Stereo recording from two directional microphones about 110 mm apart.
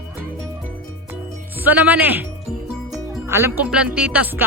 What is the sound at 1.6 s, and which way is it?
Speech, 15° right (ahead or behind).